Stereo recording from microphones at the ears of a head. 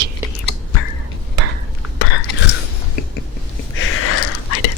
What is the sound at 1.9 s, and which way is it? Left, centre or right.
Whispering, left.